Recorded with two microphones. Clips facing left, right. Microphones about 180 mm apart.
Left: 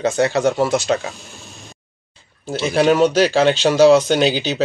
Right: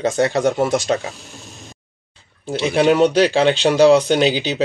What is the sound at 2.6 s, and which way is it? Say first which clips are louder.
Speech: even; 15° right (ahead or behind).